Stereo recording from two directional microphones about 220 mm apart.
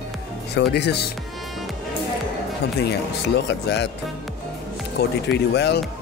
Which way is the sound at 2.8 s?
50° left (ahead or behind).